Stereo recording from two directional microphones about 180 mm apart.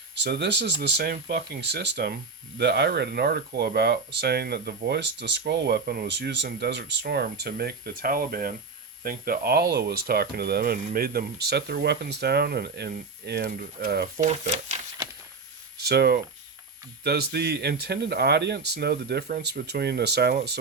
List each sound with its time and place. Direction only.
0.2 s speech: 70° right (ahead or behind)
14.2 s speech: 40° right (ahead or behind)
15.8 s speech: 65° right (ahead or behind)